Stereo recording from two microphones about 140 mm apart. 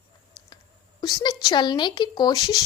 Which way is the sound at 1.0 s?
30° left (ahead or behind).